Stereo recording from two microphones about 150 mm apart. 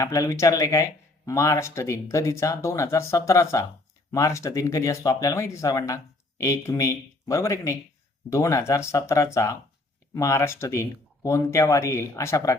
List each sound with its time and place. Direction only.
0.0 s speech: 20° left (ahead or behind)